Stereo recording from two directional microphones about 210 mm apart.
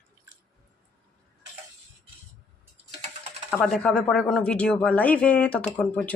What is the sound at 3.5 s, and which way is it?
Speech, 5° left (ahead or behind).